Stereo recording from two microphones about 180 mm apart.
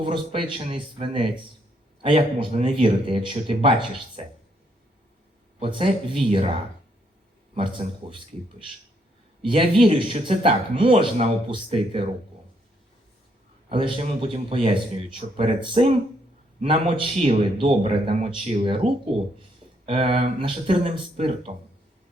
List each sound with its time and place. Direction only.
0.0 s speech: 30° right (ahead or behind)
5.5 s speech: 30° right (ahead or behind)
7.5 s speech: 30° right (ahead or behind)
13.7 s speech: 30° right (ahead or behind)